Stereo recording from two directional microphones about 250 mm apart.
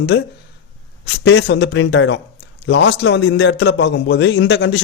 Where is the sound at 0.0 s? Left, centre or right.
Left.